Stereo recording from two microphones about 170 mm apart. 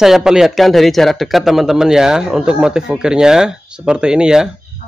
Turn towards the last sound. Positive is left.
turn(degrees=-5)  # may be behind; listen again after turning